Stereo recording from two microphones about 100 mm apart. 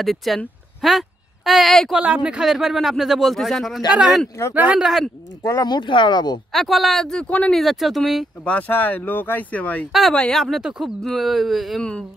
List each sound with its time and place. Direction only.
0.0 s speech: centre (ahead or behind)
2.0 s speech: 15° right (ahead or behind)
4.4 s speech: 30° left (ahead or behind)
4.7 s speech: centre (ahead or behind)
5.4 s speech: 30° left (ahead or behind)
5.7 s speech: 55° left (ahead or behind)
6.5 s speech: centre (ahead or behind)
7.6 s speech: centre (ahead or behind)
8.5 s speech: 15° left (ahead or behind)
9.9 s speech: centre (ahead or behind)